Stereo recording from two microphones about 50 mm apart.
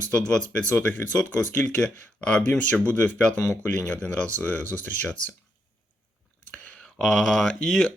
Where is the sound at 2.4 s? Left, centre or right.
Left.